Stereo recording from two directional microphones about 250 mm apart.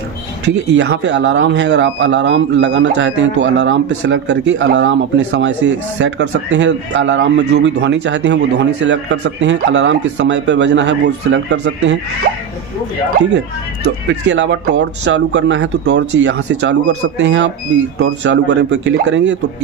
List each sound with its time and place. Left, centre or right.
0.7 s speech: right
14.2 s speech: right